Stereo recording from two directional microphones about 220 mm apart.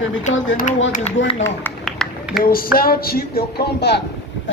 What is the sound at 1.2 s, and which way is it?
Speech, 55° left (ahead or behind).